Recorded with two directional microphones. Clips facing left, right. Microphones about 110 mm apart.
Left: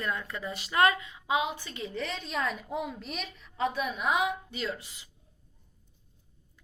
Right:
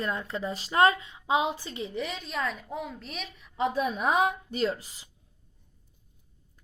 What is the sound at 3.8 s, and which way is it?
Speech, 35° right (ahead or behind).